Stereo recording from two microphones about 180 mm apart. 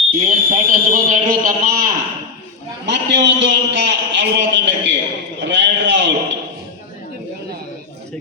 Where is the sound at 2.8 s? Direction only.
75° right (ahead or behind).